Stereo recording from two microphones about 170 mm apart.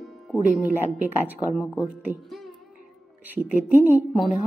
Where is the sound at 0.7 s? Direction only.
10° right (ahead or behind).